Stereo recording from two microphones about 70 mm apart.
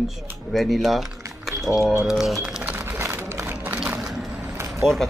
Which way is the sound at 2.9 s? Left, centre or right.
Right.